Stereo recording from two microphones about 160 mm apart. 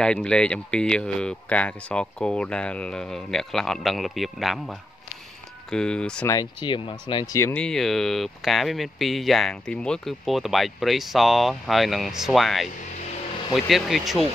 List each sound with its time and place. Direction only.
0.0 s speech: 5° left (ahead or behind)
6.2 s speech: 25° left (ahead or behind)
7.3 s speech: 10° left (ahead or behind)